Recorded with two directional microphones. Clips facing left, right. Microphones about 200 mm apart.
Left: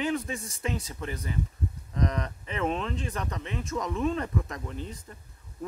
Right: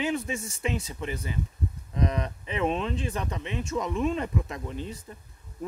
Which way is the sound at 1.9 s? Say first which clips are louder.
Right 1 dB; 10° right (ahead or behind).